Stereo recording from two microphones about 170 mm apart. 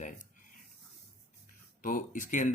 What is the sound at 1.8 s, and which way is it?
Speech, 55° left (ahead or behind).